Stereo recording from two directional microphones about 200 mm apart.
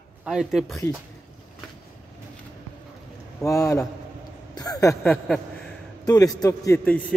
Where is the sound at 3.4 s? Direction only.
15° left (ahead or behind).